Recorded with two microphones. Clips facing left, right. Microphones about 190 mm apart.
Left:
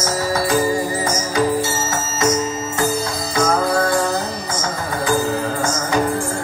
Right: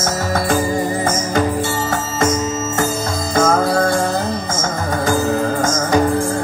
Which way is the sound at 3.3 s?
50° right (ahead or behind).